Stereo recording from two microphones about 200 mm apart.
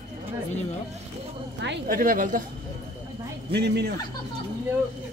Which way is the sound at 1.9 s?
45° right (ahead or behind).